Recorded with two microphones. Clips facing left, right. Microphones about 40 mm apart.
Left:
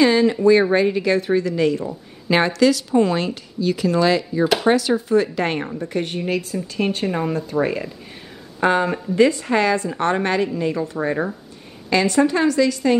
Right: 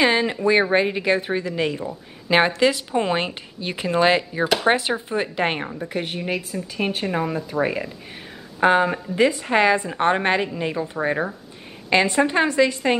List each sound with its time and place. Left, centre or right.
0.0 s a woman's voice: right
5.8 s a woman's voice: centre; by 12.9 s right